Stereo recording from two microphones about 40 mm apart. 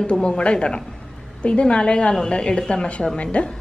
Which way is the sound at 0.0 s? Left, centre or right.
Left.